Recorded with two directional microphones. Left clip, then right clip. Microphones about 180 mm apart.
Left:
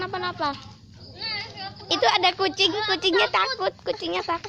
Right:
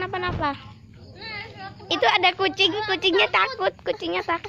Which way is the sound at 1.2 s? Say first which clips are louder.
Left 4 dB; 45° right (ahead or behind).